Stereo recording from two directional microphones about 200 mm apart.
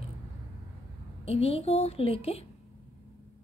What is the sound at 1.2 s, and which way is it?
A woman's voice, 30° left (ahead or behind).